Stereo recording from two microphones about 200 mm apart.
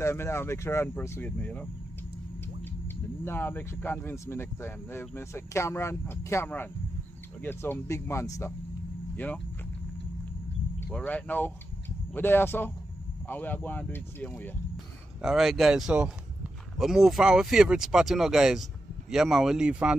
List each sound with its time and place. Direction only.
0.0 s speech: 15° left (ahead or behind)
3.3 s speech: 10° left (ahead or behind)
10.9 s speech: 5° left (ahead or behind)
15.2 s speech: centre (ahead or behind)